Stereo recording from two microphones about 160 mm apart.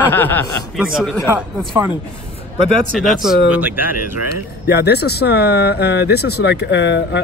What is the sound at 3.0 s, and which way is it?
Speech, centre (ahead or behind).